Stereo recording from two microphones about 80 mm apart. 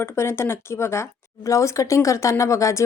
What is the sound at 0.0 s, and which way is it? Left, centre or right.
A woman's voice, left.